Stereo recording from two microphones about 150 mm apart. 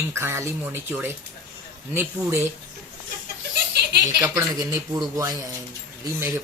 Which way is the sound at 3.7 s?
90° right.